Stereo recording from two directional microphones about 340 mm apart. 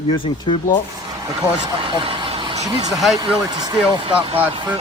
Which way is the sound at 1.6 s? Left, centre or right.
Centre.